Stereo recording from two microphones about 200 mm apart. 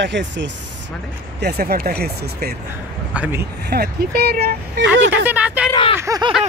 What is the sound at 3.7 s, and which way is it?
Speech, 50° right (ahead or behind).